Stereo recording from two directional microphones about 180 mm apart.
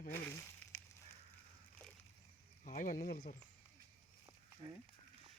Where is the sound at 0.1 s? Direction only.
10° left (ahead or behind).